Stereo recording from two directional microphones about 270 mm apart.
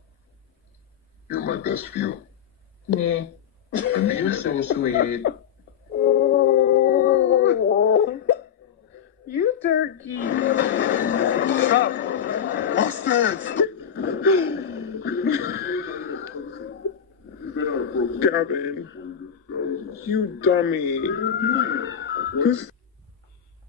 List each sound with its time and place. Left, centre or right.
1.3 s speech: left
3.8 s speech: left
5.9 s howl: left
9.3 s a sound: left
10.2 s music: left
17.6 s a sound: left
19.5 s speech: left